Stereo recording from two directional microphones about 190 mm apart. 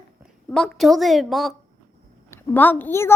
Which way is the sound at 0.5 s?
5° left (ahead or behind).